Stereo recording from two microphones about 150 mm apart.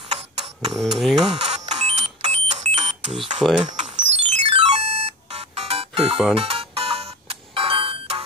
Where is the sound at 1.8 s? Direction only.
45° right (ahead or behind).